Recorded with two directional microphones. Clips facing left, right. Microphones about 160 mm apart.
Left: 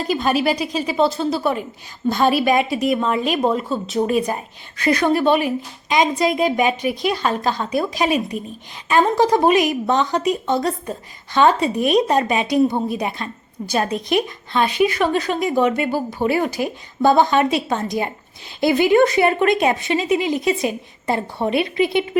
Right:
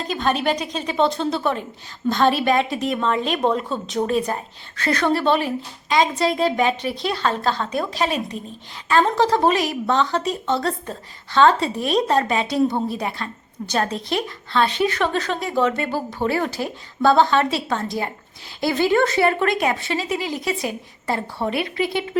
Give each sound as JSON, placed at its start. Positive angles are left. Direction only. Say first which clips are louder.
{"t": 0.0, "sound": "a woman's voice", "louder": "left 3 dB", "side_deg": 10}